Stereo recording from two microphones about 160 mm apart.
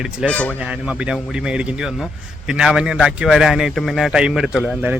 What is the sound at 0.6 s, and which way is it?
Speech, 5° right (ahead or behind).